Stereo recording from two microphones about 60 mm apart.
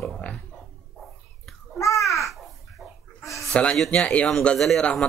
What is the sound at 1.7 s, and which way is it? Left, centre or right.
Babbling, left.